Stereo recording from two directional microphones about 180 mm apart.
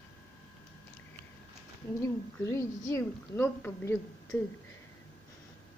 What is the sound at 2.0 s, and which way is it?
A woman's voice, 15° left (ahead or behind).